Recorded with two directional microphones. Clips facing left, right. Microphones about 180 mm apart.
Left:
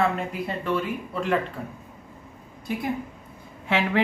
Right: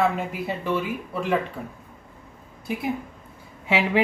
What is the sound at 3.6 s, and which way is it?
Speech, 10° right (ahead or behind).